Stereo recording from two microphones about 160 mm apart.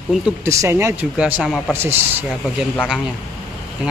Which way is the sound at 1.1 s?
5° right (ahead or behind).